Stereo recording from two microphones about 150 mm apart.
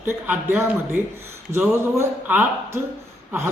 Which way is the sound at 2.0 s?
10° right (ahead or behind).